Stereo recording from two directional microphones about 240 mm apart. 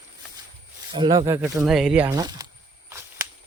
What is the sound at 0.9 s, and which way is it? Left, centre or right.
Speech, centre.